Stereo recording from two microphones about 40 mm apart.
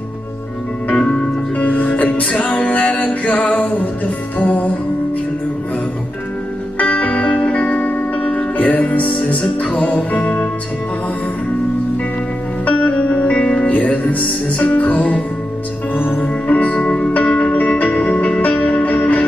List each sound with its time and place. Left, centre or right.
1.6 s music: left
6.8 s music: left
7.3 s music: left
9.4 s music: left
9.8 s music: left
12.6 s music: left